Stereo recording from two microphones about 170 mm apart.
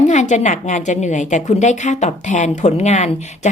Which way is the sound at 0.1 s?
45° left (ahead or behind).